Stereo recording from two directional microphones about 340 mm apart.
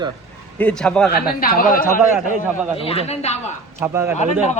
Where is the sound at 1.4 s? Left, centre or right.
Left.